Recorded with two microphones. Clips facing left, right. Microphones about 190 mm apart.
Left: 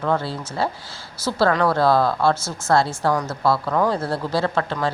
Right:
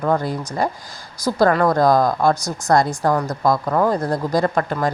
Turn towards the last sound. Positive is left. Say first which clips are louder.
# right 3 dB
turn(degrees=-15)  # may be behind; listen again after turning